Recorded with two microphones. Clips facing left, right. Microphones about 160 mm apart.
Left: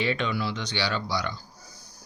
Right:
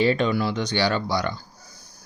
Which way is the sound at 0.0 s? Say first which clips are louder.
Right 7 dB; 40° right (ahead or behind).